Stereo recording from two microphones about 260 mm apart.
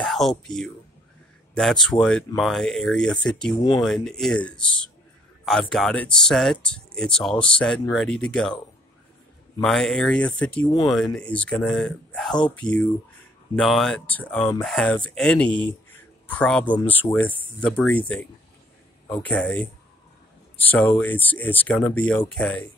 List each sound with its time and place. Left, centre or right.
0.0 s speech: centre
9.6 s speech: centre
15.9 s a sound: centre
16.8 s speech: centre
19.2 s speech: centre